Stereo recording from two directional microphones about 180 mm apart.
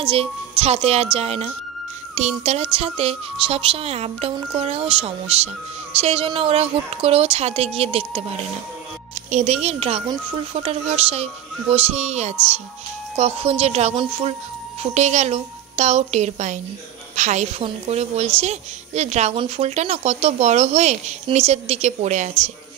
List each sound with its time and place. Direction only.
0.0 s a woman's voice: 30° right (ahead or behind)